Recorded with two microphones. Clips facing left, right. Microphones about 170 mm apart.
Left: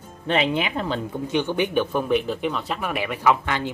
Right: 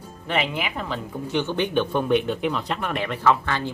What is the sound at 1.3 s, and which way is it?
Speech, 15° left (ahead or behind).